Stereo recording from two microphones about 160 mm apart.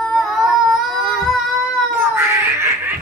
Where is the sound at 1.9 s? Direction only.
15° right (ahead or behind).